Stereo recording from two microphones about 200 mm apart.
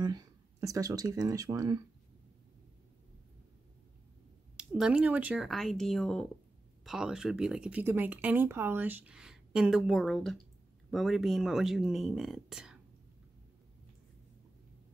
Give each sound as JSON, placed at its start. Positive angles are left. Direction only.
{"t": 0.0, "sound": "speech", "side_deg": -20}
{"t": 4.6, "sound": "speech", "side_deg": -5}